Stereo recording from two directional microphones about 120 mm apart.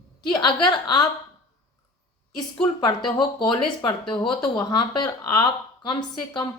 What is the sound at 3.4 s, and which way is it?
A woman's voice, 40° left (ahead or behind).